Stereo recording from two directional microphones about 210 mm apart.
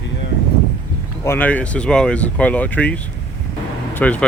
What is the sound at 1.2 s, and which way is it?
Speech, 10° left (ahead or behind).